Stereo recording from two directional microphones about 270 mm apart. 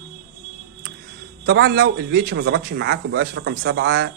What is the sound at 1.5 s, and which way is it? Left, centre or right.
Speech, right.